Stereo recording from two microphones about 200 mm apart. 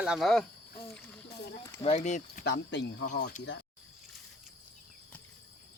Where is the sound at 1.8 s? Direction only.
30° left (ahead or behind).